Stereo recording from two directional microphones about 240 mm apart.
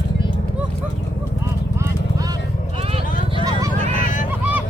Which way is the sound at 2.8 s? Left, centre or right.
Right.